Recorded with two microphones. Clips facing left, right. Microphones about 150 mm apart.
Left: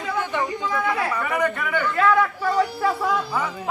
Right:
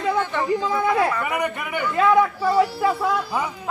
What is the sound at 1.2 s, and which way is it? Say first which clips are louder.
A man's voice: left 1 dB; 15° right (ahead or behind).